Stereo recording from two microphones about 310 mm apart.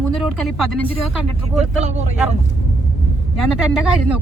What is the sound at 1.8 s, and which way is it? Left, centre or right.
Speech, right.